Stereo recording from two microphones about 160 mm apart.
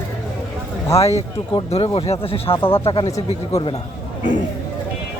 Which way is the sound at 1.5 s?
35° left (ahead or behind).